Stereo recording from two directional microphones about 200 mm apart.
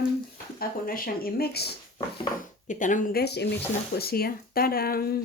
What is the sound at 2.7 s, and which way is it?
Speech, 40° left (ahead or behind).